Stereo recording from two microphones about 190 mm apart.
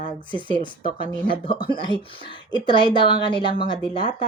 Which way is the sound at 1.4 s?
25° left (ahead or behind).